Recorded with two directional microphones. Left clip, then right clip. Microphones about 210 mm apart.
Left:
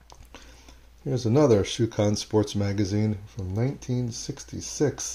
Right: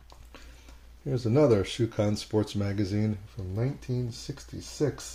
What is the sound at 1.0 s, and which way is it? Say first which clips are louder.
Speech: left 2 dB; 20° left (ahead or behind).